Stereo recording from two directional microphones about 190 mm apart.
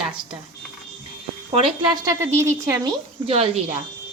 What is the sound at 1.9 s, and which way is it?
A woman's voice, 20° right (ahead or behind).